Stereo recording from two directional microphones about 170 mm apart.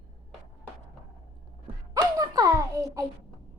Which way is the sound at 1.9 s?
20° right (ahead or behind).